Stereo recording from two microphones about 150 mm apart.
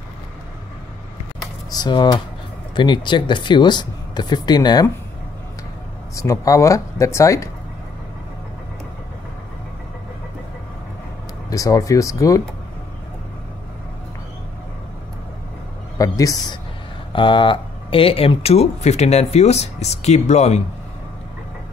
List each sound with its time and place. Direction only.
1.7 s speech: 30° left (ahead or behind)
6.1 s speech: 20° left (ahead or behind)
11.5 s speech: 20° left (ahead or behind)
16.0 s speech: 25° left (ahead or behind)
17.1 s speech: 35° left (ahead or behind)